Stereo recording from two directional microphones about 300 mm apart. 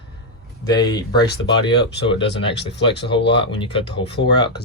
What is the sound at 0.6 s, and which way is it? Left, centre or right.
Speech, centre.